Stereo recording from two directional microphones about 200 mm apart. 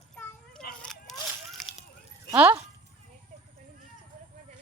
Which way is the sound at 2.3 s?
10° right (ahead or behind).